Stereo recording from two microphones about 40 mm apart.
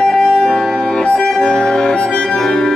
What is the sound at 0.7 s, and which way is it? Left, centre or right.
Music, left.